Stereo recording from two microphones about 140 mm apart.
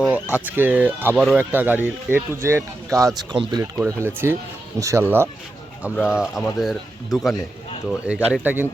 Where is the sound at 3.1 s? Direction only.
35° right (ahead or behind).